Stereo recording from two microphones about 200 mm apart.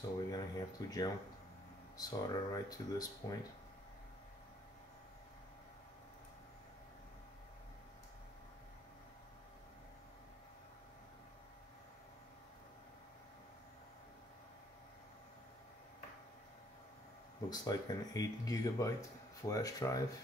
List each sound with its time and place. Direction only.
0.3 s speech: 20° left (ahead or behind)
17.5 s speech: 20° left (ahead or behind)